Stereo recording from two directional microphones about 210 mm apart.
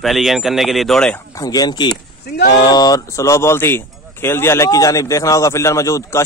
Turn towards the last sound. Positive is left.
turn(degrees=15)  # may be behind; listen again after turning